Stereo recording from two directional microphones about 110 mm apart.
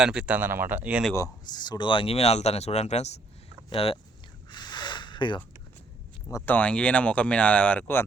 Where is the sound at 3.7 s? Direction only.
60° left (ahead or behind).